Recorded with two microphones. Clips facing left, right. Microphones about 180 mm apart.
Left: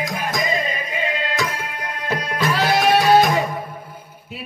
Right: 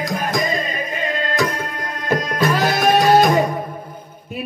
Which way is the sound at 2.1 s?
45° right (ahead or behind).